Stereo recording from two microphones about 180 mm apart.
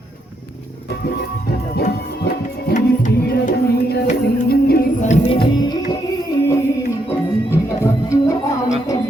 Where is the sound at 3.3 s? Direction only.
65° left (ahead or behind).